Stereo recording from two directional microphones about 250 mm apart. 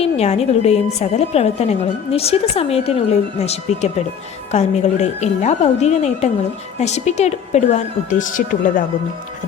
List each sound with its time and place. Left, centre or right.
0.0 s speech: left